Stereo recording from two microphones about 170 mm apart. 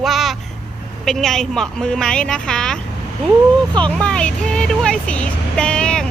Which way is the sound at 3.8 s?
5° left (ahead or behind).